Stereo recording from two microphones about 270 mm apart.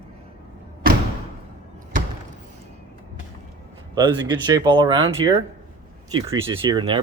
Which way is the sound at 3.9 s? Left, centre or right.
Centre.